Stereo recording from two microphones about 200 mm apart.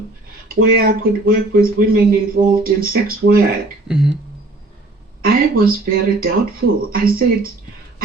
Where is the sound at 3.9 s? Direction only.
Centre (ahead or behind).